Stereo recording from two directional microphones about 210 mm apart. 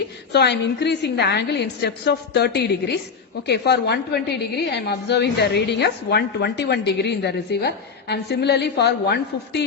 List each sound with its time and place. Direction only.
0.3 s a woman's voice: 55° left (ahead or behind)